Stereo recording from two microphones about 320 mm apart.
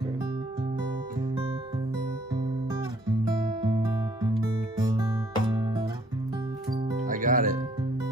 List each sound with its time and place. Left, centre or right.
3.6 s music: centre
4.8 s guitar: centre
7.1 s music: right